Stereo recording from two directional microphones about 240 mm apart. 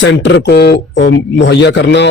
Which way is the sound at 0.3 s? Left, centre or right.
Left.